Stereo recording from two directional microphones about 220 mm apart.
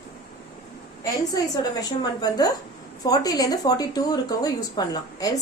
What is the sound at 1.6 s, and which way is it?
Speech, 15° left (ahead or behind).